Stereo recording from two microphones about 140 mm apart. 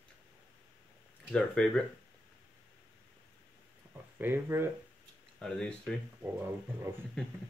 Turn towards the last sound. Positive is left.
turn(degrees=-15)  # may be behind; listen again after turning